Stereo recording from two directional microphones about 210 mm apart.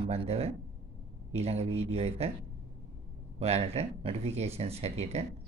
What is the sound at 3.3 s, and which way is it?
Speech, 30° right (ahead or behind).